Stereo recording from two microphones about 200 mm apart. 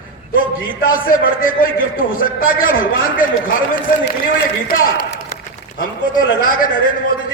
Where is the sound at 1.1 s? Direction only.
45° left (ahead or behind).